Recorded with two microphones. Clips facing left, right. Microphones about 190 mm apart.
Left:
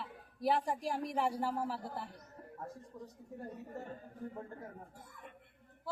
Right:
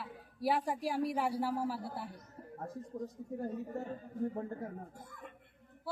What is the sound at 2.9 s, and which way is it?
Speech, 50° right (ahead or behind).